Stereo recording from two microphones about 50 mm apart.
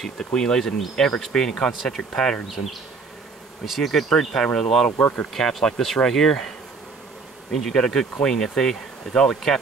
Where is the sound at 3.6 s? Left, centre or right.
Centre.